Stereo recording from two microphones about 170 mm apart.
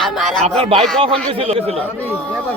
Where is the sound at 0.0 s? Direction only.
Centre (ahead or behind).